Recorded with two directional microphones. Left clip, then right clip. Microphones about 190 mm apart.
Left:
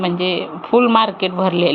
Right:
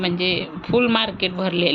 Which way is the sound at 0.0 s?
5° left (ahead or behind).